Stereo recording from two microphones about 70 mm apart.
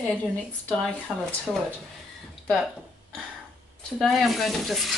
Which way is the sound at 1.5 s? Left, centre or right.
Centre.